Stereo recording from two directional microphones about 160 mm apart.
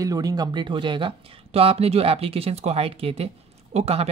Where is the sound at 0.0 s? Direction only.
25° right (ahead or behind).